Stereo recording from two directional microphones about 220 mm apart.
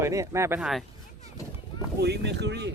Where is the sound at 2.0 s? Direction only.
50° right (ahead or behind).